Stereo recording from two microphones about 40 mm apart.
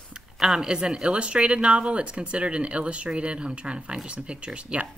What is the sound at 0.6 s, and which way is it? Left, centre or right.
Speech, centre.